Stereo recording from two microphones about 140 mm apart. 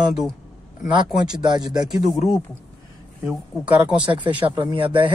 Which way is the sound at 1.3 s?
30° right (ahead or behind).